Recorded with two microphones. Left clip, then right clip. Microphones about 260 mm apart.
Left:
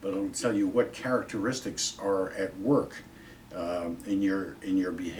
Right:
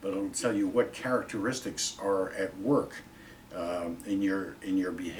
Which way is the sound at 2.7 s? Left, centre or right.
Centre.